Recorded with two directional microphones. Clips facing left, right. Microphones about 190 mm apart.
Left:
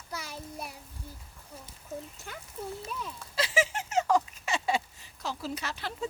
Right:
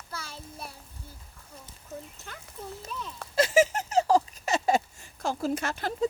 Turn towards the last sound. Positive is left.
turn(degrees=-45)  # may be behind; listen again after turning